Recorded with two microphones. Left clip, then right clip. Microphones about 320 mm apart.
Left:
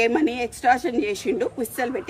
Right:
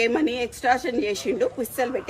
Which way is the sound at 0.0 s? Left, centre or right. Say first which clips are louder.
Left 1 dB; centre.